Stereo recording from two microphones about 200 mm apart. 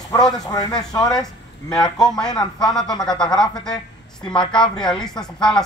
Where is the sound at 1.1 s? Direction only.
Centre (ahead or behind).